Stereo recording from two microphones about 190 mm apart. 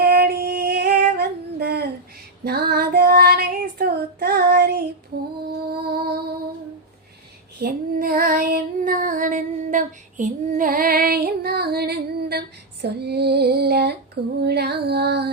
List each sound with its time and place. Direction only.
0.0 s singing: 55° right (ahead or behind)
2.4 s child singing: 55° right (ahead or behind)
5.8 s music: 55° right (ahead or behind)
7.6 s female singing: 50° right (ahead or behind)